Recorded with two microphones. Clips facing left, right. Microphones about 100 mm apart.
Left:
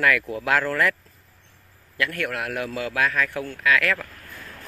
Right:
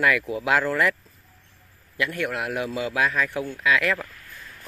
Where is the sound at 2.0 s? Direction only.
15° right (ahead or behind).